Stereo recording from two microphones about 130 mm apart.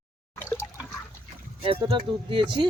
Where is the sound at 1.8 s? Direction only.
35° right (ahead or behind).